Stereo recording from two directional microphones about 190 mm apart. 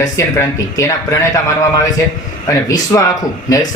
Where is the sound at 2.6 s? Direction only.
20° left (ahead or behind).